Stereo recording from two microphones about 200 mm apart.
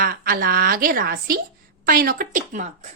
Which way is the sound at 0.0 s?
45° right (ahead or behind).